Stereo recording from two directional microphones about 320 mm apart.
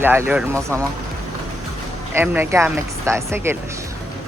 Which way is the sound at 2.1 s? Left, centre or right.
Centre.